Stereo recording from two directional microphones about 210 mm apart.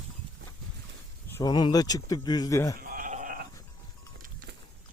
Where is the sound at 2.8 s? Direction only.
40° right (ahead or behind).